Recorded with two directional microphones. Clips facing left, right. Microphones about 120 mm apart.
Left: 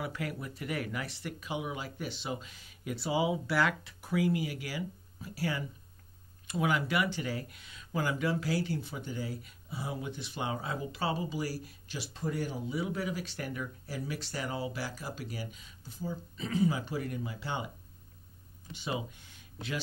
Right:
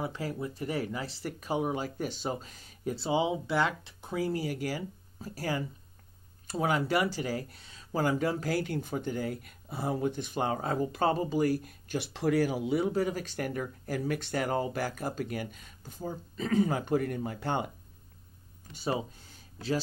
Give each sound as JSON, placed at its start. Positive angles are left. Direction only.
{"t": 0.0, "sound": "speech", "side_deg": -30}
{"t": 3.1, "sound": "speech", "side_deg": -25}
{"t": 12.1, "sound": "speech", "side_deg": -90}
{"t": 12.8, "sound": "speech", "side_deg": -45}
{"t": 18.7, "sound": "speech", "side_deg": -40}